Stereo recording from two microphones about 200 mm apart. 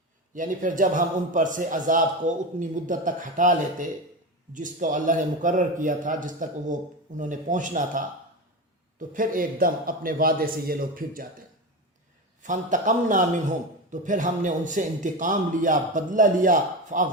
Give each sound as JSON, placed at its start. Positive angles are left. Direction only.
{"t": 0.3, "sound": "a man's voice", "side_deg": -40}
{"t": 12.4, "sound": "a man's voice", "side_deg": -40}